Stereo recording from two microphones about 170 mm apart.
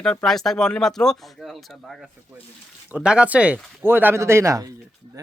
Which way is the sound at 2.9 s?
5° right (ahead or behind).